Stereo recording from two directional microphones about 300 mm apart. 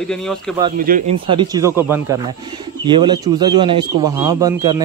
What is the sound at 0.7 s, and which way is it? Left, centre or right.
Speech, right.